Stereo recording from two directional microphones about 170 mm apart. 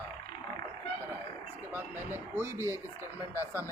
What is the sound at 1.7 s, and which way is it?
Speech, 10° right (ahead or behind).